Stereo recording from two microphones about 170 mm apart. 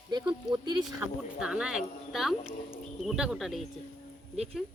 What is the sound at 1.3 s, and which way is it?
A woman's voice, 5° right (ahead or behind).